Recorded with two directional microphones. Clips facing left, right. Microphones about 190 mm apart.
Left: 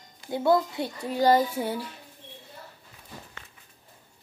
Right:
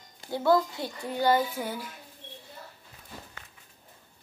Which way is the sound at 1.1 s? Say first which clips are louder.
Left 4 dB; 40° left (ahead or behind).